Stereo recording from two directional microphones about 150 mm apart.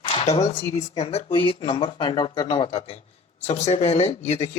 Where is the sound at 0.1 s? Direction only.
40° left (ahead or behind).